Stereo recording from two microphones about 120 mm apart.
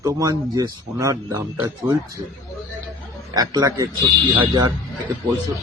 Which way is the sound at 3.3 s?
30° right (ahead or behind).